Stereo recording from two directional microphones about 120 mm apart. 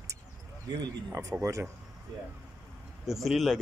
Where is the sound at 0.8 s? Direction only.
30° right (ahead or behind).